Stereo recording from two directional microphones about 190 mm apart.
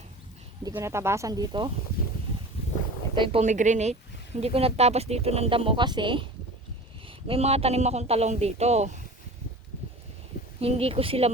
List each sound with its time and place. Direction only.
0.6 s speech: 15° right (ahead or behind)
3.2 s speech: 35° right (ahead or behind)
7.3 s speech: 35° right (ahead or behind)
10.6 s speech: 30° right (ahead or behind)